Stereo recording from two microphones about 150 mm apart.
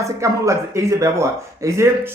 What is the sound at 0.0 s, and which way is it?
Speech, 20° right (ahead or behind).